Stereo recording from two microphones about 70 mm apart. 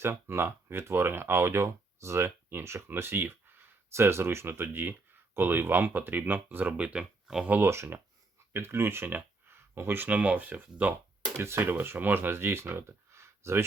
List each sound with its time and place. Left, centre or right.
0.0 s speech: right
6.9 s speech: centre
7.4 s speech: right
7.7 s speech: right
11.3 s speech: right